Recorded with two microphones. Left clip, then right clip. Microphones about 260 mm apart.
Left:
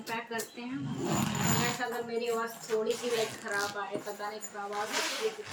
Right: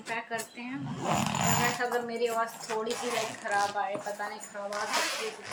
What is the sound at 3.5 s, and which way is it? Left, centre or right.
Speech, centre.